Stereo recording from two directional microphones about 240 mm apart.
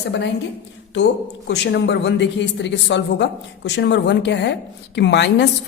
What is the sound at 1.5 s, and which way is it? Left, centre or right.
A man's voice, left.